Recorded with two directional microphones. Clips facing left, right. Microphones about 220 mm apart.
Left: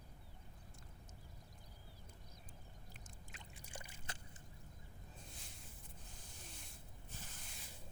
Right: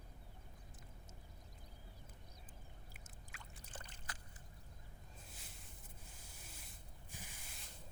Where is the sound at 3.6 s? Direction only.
10° left (ahead or behind).